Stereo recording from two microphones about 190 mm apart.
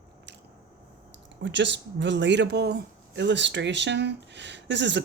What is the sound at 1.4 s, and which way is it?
Speech, 70° right (ahead or behind).